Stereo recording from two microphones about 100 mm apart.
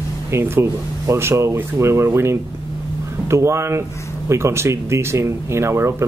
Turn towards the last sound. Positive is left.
turn(degrees=-25)  # may be behind; listen again after turning